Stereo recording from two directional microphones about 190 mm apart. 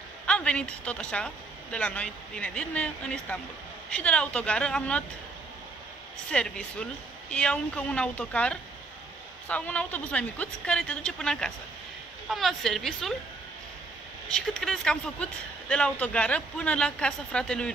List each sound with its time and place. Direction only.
0.3 s speech: 5° left (ahead or behind)
6.3 s speech: 5° left (ahead or behind)
14.3 s speech: centre (ahead or behind)